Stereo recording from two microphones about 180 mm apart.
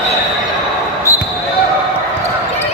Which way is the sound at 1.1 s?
15° left (ahead or behind).